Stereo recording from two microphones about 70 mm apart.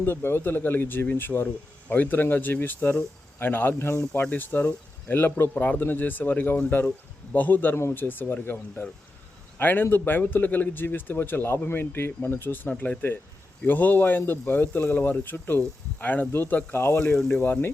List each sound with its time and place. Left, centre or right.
0.0 s a man's voice: left
9.6 s a man's voice: left
17.2 s speech: centre
17.4 s speech: left